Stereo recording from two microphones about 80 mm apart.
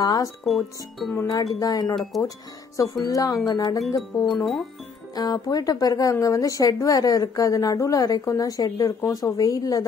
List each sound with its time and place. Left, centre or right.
0.0 s speech: left
0.4 s speech: centre
1.2 s speech: left